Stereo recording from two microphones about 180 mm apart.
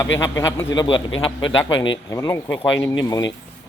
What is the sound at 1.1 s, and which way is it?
Speech, 90° left.